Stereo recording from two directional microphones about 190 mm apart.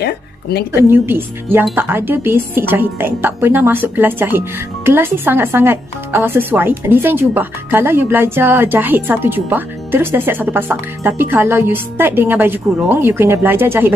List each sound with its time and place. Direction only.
0.0 s a woman's voice: 60° left (ahead or behind)
0.8 s a woman's voice: 10° right (ahead or behind)